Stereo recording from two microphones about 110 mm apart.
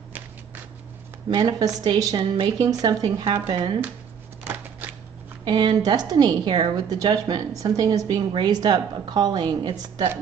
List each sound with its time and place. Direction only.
1.3 s a woman's voice: 40° right (ahead or behind)
4.5 s shuffling cards: 15° right (ahead or behind)
5.4 s a woman's voice: 45° right (ahead or behind)